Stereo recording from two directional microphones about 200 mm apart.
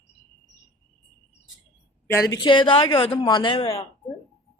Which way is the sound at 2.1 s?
15° left (ahead or behind).